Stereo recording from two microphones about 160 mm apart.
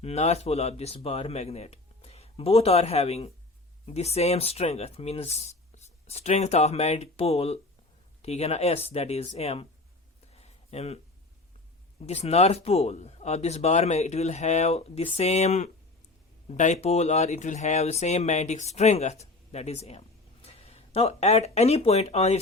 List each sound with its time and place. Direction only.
0.0 s speech: 40° left (ahead or behind)
10.3 s a sound: 40° left (ahead or behind)
12.0 s speech: 40° left (ahead or behind)